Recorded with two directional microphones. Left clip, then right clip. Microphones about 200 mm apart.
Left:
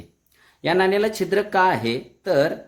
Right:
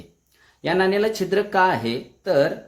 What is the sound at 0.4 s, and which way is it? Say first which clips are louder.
Speech: left 1 dB; 20° left (ahead or behind).